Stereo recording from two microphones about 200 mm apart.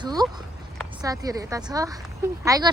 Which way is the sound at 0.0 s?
20° right (ahead or behind).